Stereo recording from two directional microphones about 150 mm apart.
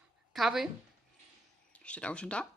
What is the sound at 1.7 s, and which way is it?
Speech, 10° left (ahead or behind).